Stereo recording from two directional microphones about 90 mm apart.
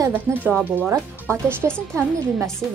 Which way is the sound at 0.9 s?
30° right (ahead or behind).